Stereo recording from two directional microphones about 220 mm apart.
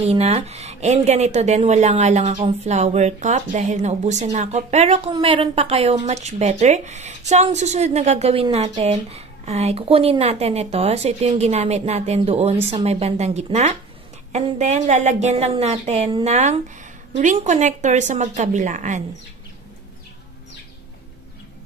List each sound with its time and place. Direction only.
0.0 s a woman's voice: 30° right (ahead or behind)